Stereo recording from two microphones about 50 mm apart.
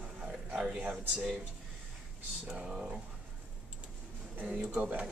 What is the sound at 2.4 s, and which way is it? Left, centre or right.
Speech, centre.